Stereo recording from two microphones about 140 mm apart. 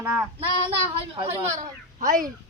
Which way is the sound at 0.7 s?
40° right (ahead or behind).